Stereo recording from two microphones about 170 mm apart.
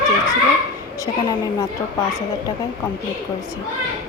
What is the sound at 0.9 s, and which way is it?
Speech, 20° left (ahead or behind).